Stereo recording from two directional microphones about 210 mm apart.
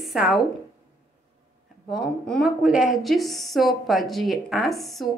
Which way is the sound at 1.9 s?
Centre (ahead or behind).